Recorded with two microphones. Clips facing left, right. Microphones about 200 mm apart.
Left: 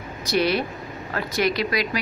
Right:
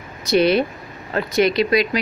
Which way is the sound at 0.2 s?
20° right (ahead or behind).